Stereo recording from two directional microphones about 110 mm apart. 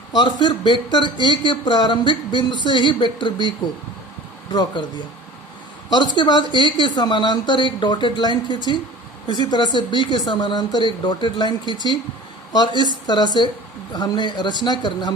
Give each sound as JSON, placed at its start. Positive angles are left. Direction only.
{"t": 0.2, "sound": "speech", "side_deg": 45}
{"t": 4.5, "sound": "speech", "side_deg": 45}
{"t": 5.9, "sound": "speech", "side_deg": 45}